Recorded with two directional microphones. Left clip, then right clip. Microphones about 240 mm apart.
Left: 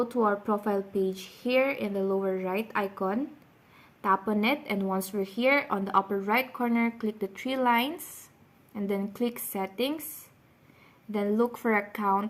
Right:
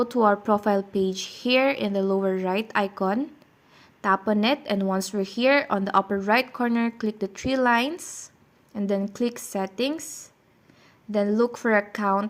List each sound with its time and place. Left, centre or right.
0.0 s a woman's voice: right
11.1 s a woman's voice: right